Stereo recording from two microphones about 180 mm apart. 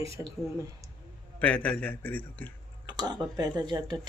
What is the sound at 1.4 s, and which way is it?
Speech, 10° left (ahead or behind).